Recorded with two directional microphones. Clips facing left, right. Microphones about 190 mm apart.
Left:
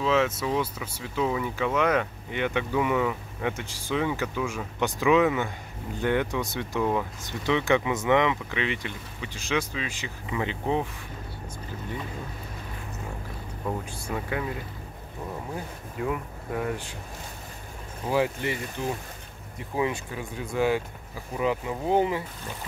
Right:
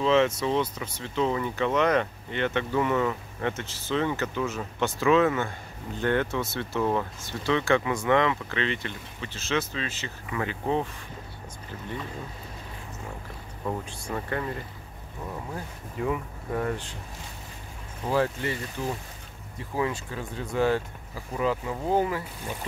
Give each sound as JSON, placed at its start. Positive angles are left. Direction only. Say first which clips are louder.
{"t": 0.0, "sound": "speech", "louder": "right 2 dB", "side_deg": 5}
{"t": 7.2, "sound": "speech", "louder": "even", "side_deg": 15}
{"t": 13.7, "sound": "speech", "louder": "even", "side_deg": 5}
{"t": 16.0, "sound": "speech", "louder": "right 1 dB", "side_deg": 5}
{"t": 18.1, "sound": "speech", "louder": "even", "side_deg": 15}
{"t": 19.7, "sound": "speech", "louder": "left 1 dB", "side_deg": 20}